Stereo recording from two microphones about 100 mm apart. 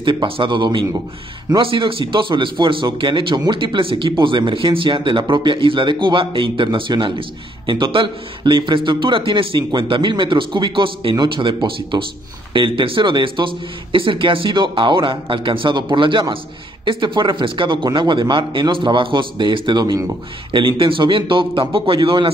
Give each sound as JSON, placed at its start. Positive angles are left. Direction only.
{"t": 0.0, "sound": "a man's voice", "side_deg": -55}
{"t": 1.6, "sound": "a man's voice", "side_deg": -60}